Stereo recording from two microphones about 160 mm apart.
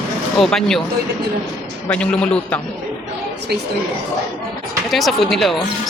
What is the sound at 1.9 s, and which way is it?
Speech, 5° left (ahead or behind).